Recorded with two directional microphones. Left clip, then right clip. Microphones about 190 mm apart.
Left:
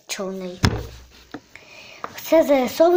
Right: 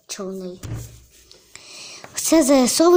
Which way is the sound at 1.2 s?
60° right (ahead or behind).